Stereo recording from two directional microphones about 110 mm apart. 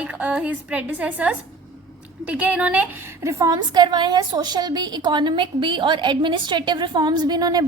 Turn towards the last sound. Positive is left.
turn(degrees=-35)  # may be behind; listen again after turning